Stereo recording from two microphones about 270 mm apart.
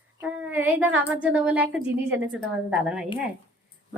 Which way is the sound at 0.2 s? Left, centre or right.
Centre.